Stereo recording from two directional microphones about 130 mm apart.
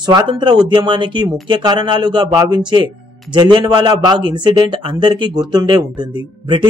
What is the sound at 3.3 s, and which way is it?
A man's voice, 35° right (ahead or behind).